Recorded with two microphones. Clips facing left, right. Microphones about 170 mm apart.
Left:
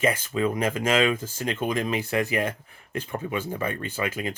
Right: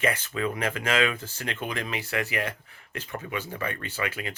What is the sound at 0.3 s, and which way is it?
Speech, 25° left (ahead or behind).